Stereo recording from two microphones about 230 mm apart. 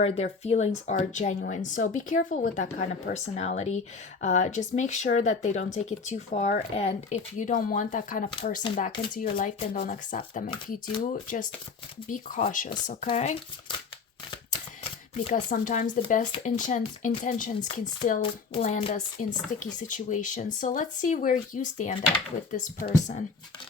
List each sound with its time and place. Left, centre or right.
0.0 s a woman's voice: left
15.2 s a woman's voice: left